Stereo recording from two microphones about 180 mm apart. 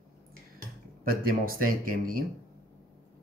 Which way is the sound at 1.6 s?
50° right (ahead or behind).